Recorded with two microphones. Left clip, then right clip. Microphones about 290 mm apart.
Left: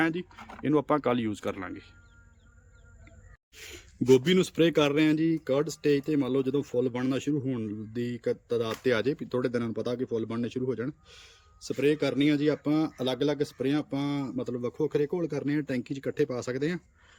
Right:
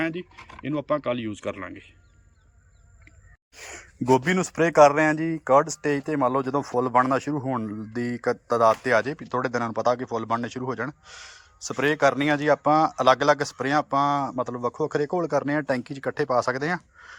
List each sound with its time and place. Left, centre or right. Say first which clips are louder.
0.0 s speech: even; centre
3.7 s speech: right 1 dB; centre
7.4 s speech: right 6 dB; right
8.2 s speech: right 10 dB; centre